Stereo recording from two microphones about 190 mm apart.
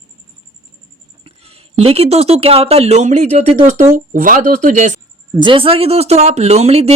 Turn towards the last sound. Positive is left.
turn(degrees=-35)  # may be behind; listen again after turning